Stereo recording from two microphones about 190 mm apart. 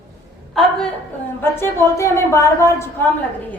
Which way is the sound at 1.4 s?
10° left (ahead or behind).